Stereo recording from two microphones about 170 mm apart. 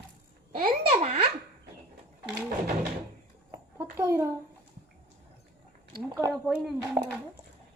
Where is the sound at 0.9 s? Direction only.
35° right (ahead or behind).